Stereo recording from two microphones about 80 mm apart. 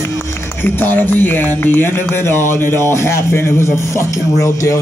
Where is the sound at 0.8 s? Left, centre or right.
Left.